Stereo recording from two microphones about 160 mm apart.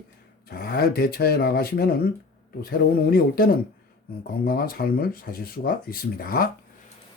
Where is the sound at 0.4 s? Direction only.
70° left (ahead or behind).